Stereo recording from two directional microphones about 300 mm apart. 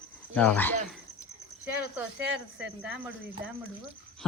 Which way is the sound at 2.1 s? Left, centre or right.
Right.